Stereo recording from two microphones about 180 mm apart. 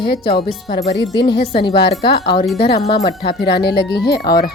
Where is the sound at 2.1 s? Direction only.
65° left (ahead or behind).